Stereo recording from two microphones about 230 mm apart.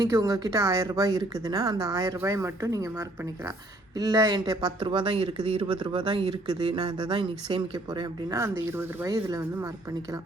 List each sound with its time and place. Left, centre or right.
0.0 s speech: centre